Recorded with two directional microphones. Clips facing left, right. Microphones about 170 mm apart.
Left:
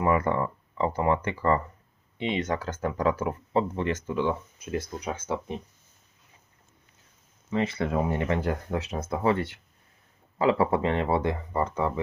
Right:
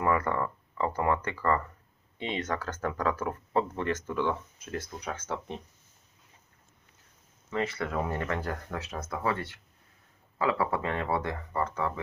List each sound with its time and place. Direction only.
0.0 s speech: 15° left (ahead or behind)
2.3 s speech: 15° left (ahead or behind)
7.5 s speech: 25° left (ahead or behind)